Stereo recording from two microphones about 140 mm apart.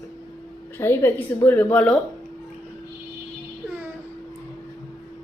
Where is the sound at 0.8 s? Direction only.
15° left (ahead or behind).